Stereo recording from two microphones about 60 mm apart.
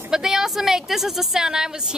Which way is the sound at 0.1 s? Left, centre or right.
Centre.